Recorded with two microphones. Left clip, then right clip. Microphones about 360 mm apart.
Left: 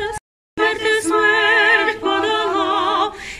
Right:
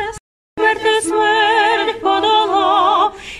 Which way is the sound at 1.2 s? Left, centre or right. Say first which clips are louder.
Right 1 dB; centre.